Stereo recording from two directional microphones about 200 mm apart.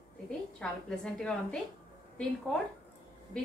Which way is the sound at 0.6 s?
5° left (ahead or behind).